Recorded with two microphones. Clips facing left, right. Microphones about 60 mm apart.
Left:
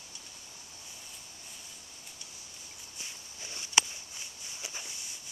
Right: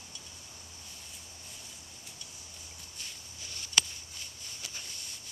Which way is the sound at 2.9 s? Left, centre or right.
Left.